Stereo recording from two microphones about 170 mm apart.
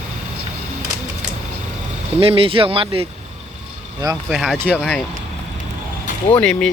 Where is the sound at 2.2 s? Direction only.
35° right (ahead or behind).